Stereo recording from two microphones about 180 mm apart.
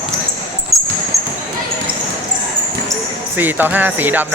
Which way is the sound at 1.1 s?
15° right (ahead or behind).